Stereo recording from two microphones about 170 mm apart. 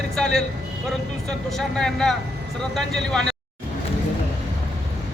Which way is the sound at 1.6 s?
5° left (ahead or behind).